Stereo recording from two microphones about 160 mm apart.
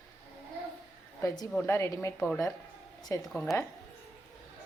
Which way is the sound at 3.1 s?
15° left (ahead or behind).